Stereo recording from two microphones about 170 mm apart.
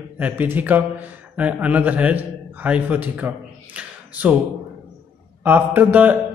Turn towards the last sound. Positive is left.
turn(degrees=-10)  # may be behind; listen again after turning